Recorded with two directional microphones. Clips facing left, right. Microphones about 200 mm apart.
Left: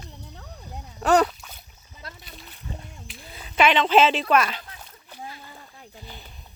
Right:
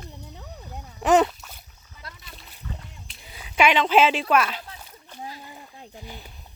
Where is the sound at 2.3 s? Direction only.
Centre (ahead or behind).